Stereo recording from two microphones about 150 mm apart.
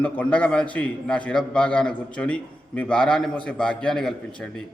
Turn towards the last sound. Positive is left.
turn(degrees=5)  # may be behind; listen again after turning